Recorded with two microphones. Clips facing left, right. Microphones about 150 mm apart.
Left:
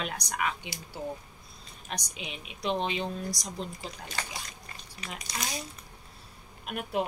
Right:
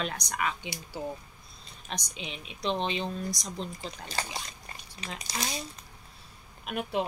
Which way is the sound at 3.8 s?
30° right (ahead or behind).